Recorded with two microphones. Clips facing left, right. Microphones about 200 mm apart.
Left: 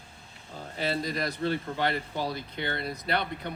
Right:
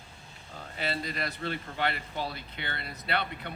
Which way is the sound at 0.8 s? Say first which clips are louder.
Left 4 dB; 40° left (ahead or behind).